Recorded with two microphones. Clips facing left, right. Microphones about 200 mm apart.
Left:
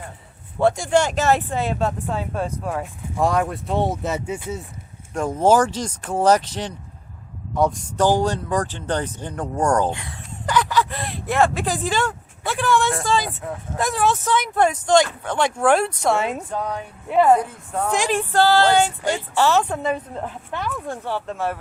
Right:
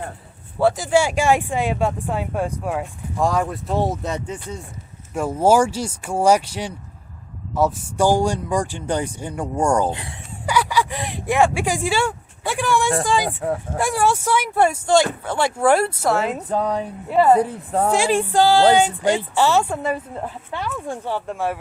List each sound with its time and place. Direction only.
0.6 s speech: 5° right (ahead or behind)
3.2 s speech: centre (ahead or behind)
5.1 s speech: 5° right (ahead or behind)
10.4 s a sound: 10° right (ahead or behind)
13.1 s speech: 15° right (ahead or behind)
16.5 s speech: 35° right (ahead or behind)
17.1 s speech: 5° right (ahead or behind)
17.4 s speech: 35° right (ahead or behind)
17.9 s speech: 10° right (ahead or behind)